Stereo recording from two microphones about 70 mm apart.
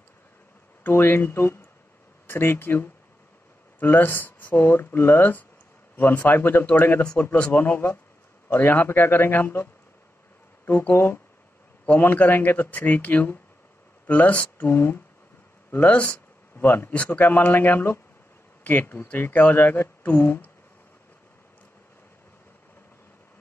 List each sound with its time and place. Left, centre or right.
0.8 s a man's voice: left
7.5 s a man's voice: left
15.7 s a man's voice: left